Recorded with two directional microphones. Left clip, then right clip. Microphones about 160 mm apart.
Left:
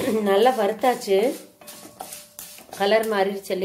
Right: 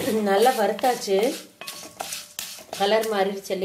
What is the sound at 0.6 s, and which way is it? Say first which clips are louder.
Speech: left 1 dB; 5° right (ahead or behind).